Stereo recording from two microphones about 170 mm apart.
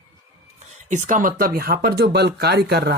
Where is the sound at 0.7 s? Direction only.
45° right (ahead or behind).